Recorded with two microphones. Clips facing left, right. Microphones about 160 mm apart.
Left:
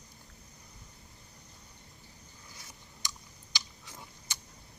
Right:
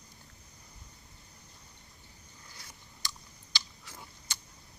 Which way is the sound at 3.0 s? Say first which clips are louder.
Even; 15° left (ahead or behind).